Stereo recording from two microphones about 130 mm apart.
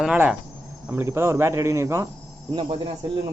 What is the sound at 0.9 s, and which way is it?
Speech, 20° right (ahead or behind).